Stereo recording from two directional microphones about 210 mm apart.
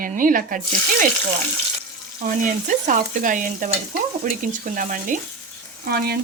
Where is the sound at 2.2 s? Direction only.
40° right (ahead or behind).